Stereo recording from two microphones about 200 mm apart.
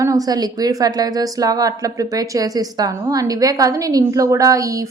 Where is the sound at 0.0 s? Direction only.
15° right (ahead or behind).